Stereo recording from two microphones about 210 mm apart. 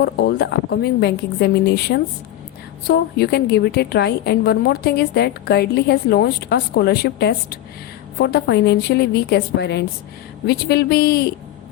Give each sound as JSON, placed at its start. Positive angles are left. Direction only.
{"t": 0.0, "sound": "a woman's voice", "side_deg": 50}